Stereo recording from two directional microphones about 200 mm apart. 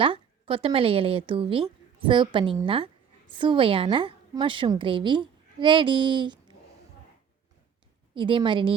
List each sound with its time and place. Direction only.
0.0 s a woman's voice: 25° right (ahead or behind)
8.1 s a woman's voice: 25° right (ahead or behind)